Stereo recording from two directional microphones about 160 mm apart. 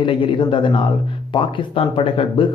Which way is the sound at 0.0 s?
30° left (ahead or behind).